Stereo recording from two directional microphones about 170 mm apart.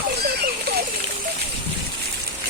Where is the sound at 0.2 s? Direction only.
70° right (ahead or behind).